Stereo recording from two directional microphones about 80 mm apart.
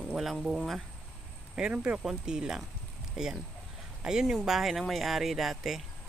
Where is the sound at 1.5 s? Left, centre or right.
Centre.